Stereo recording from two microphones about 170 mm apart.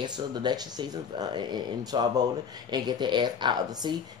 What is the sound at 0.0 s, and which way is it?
Speech, 25° right (ahead or behind).